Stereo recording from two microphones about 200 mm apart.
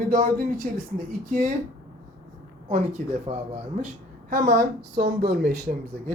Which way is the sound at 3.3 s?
25° right (ahead or behind).